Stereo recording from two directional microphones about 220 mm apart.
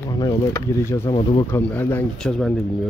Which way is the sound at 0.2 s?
15° left (ahead or behind).